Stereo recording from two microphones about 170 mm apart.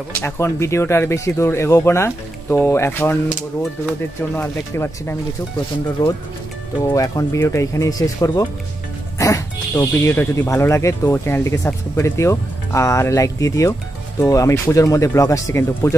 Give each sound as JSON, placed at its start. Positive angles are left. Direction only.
{"t": 0.2, "sound": "speech", "side_deg": 15}